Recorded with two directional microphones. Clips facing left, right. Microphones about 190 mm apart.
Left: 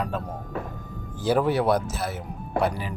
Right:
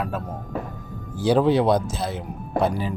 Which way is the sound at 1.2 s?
15° right (ahead or behind).